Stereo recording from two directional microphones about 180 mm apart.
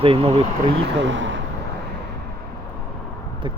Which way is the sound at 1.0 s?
90° right.